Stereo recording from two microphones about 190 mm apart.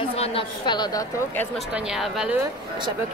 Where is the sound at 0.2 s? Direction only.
25° left (ahead or behind).